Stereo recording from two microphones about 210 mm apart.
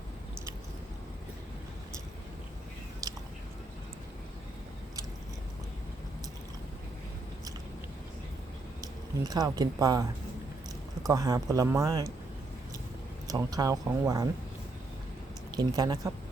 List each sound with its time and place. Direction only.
3.0 s biting: 15° right (ahead or behind)
8.8 s speech: 20° right (ahead or behind)
11.1 s speech: 15° right (ahead or behind)
13.2 s speech: 15° right (ahead or behind)
15.5 s speech: 20° right (ahead or behind)